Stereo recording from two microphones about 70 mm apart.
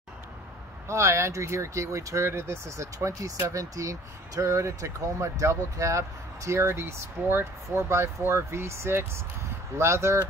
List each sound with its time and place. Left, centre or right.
0.8 s speech: right